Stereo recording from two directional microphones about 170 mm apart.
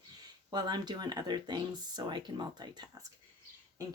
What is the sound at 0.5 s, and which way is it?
Speech, 25° right (ahead or behind).